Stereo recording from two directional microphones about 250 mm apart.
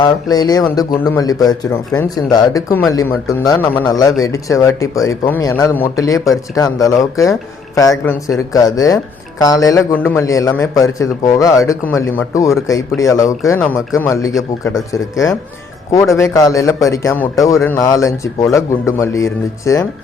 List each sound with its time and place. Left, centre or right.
0.0 s a man's voice: centre